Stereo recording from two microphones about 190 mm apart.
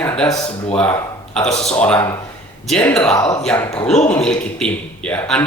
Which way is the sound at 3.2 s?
20° left (ahead or behind).